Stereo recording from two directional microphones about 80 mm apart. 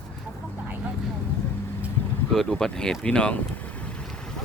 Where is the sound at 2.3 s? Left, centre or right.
Centre.